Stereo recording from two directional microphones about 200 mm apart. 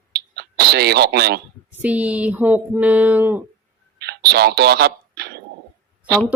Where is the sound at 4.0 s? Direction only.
55° right (ahead or behind).